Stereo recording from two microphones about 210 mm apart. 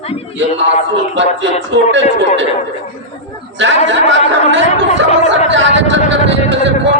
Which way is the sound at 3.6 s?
60° right (ahead or behind).